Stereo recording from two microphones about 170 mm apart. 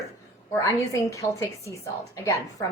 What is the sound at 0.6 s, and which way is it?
A woman's voice, 20° left (ahead or behind).